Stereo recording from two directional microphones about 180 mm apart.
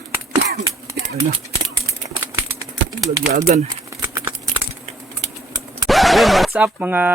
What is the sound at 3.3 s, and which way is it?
Speech, 40° right (ahead or behind).